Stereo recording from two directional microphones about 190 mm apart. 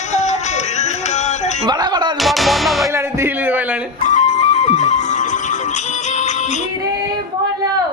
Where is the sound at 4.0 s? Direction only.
40° left (ahead or behind).